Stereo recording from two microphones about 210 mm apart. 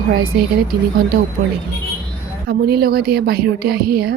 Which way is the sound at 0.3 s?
45° right (ahead or behind).